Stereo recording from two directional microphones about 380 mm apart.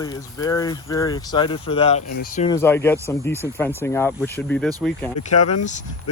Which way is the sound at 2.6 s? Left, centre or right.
Centre.